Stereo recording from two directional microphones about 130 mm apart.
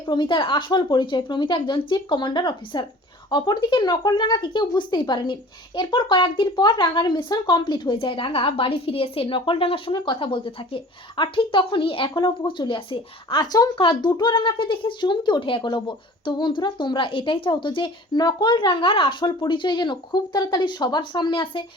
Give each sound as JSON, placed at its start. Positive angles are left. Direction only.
{"t": 0.1, "sound": "speech", "side_deg": 35}